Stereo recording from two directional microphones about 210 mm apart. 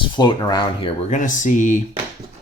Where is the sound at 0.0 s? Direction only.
20° left (ahead or behind); by 1.8 s 40° left (ahead or behind).